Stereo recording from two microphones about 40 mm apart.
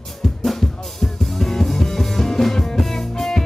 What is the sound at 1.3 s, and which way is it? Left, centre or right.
Music, centre.